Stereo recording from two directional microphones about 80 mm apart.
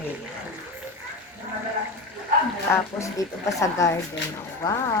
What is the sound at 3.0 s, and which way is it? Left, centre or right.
Speech, left.